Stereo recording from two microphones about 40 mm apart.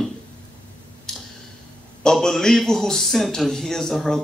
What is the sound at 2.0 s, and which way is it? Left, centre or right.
Speech, centre.